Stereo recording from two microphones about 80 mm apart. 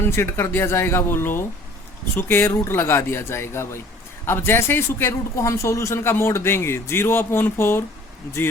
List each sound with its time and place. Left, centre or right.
0.2 s speech: left